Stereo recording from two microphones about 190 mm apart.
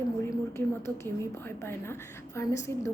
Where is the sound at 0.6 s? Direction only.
15° left (ahead or behind).